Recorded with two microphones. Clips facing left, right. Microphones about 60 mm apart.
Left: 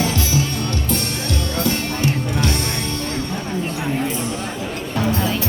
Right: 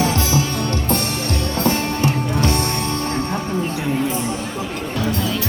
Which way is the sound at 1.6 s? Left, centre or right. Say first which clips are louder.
Right 3 dB; right.